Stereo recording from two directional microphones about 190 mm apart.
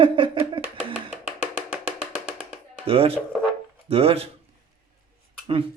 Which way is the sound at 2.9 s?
30° right (ahead or behind).